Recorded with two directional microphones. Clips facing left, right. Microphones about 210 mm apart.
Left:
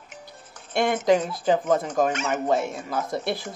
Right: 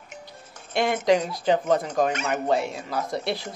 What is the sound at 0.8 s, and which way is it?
Speech, centre (ahead or behind).